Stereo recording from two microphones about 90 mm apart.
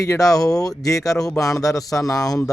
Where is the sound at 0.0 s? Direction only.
40° left (ahead or behind).